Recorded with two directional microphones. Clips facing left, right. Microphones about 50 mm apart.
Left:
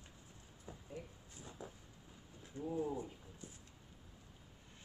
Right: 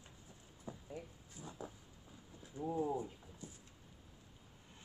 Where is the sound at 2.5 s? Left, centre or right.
Centre.